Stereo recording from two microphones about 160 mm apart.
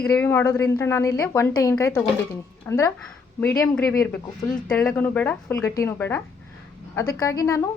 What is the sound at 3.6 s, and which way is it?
A woman's voice, 5° left (ahead or behind).